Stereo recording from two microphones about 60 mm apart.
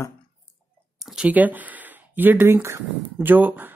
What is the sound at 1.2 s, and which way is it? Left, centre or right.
Speech, right.